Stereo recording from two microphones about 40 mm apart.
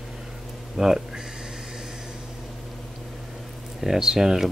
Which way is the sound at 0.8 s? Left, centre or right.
Centre.